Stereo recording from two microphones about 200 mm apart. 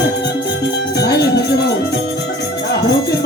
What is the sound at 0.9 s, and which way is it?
Music, 55° left (ahead or behind).